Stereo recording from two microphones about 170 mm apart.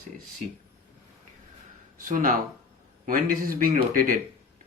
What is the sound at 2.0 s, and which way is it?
Speech, 50° right (ahead or behind).